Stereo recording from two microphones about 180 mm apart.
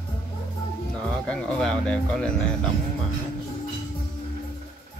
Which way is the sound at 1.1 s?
5° left (ahead or behind).